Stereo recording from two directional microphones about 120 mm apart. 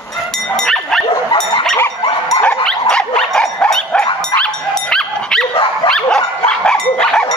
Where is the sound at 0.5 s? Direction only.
5° left (ahead or behind).